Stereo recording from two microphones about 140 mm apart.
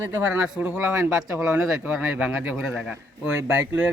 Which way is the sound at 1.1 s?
5° right (ahead or behind).